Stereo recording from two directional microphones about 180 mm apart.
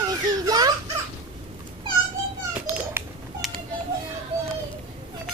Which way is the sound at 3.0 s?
15° right (ahead or behind).